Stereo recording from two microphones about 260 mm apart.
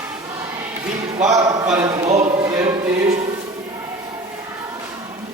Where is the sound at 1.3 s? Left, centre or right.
Centre.